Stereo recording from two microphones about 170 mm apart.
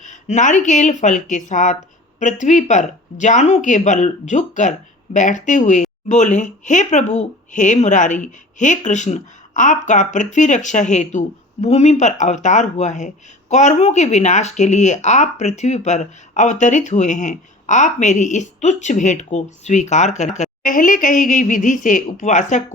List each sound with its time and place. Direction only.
0.0 s speech: 45° left (ahead or behind)